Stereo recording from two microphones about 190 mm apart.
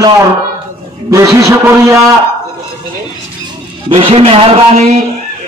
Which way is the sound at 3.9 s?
30° right (ahead or behind).